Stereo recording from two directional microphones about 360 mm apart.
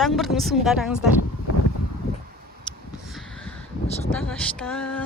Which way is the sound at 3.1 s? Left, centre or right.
Centre.